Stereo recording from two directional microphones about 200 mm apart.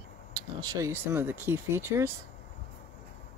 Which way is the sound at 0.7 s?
15° right (ahead or behind).